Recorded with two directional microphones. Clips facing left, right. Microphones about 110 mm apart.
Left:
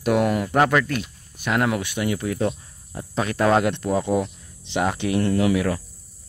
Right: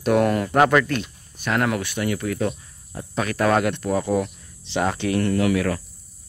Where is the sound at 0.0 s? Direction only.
10° left (ahead or behind).